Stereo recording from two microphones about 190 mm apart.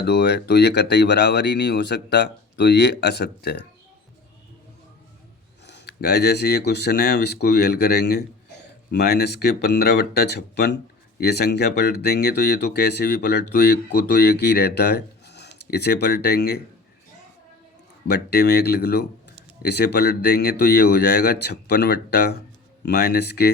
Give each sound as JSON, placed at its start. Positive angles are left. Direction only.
{"t": 0.0, "sound": "speech", "side_deg": 60}
{"t": 5.6, "sound": "speech", "side_deg": 65}
{"t": 18.1, "sound": "speech", "side_deg": 60}